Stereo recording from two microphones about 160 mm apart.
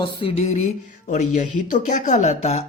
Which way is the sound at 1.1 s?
50° left (ahead or behind).